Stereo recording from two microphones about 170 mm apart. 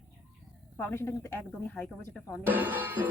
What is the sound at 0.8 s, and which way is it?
Speech, 15° left (ahead or behind).